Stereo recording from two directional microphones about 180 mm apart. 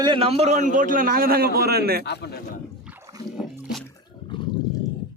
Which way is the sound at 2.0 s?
65° left (ahead or behind).